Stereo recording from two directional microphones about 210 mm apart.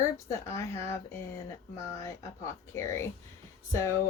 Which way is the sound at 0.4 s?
15° left (ahead or behind).